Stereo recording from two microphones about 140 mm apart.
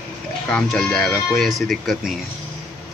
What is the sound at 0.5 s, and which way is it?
Speech, 5° left (ahead or behind).